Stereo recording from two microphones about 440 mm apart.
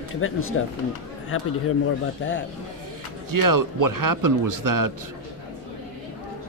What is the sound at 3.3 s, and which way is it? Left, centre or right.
Speech, right.